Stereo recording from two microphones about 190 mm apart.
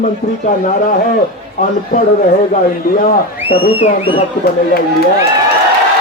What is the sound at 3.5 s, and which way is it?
Speech, 25° left (ahead or behind).